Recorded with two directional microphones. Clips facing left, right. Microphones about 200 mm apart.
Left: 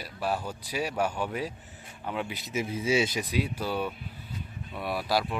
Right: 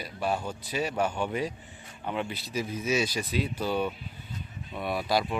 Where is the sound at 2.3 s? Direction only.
25° left (ahead or behind).